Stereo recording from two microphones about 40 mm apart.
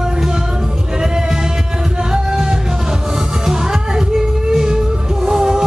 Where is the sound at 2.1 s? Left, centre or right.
Centre.